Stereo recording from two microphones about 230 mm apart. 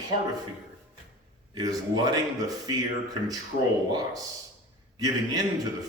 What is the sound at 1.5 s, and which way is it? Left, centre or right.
Speech, centre.